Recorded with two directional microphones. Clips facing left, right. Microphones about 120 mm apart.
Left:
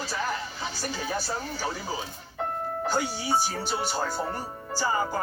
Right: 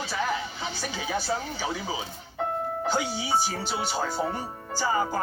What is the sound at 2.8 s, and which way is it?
Speech, 45° left (ahead or behind).